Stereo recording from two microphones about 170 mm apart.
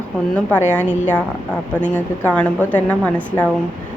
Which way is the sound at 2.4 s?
10° left (ahead or behind).